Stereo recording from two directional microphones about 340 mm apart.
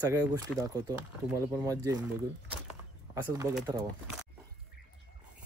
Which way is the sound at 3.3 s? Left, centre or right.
Centre.